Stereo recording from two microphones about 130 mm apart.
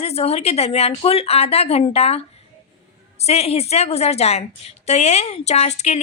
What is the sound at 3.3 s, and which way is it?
Speech, 55° left (ahead or behind).